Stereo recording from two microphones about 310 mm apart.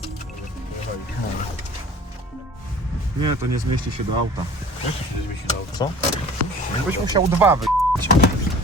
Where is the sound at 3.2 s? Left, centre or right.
Right.